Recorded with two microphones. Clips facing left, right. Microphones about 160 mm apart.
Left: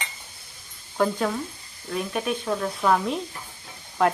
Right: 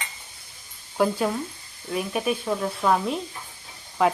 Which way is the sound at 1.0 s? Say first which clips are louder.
Right 1 dB; 10° right (ahead or behind).